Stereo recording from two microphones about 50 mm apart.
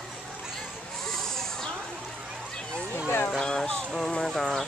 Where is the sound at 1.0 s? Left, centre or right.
Centre.